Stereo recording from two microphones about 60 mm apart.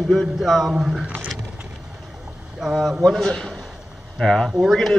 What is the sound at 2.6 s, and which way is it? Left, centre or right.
Speech, centre.